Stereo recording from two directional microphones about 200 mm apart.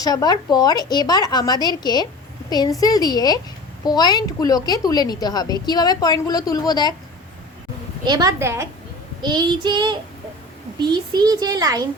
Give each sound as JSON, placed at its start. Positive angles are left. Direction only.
{"t": 0.0, "sound": "a woman's voice", "side_deg": 20}
{"t": 8.0, "sound": "a woman's voice", "side_deg": -20}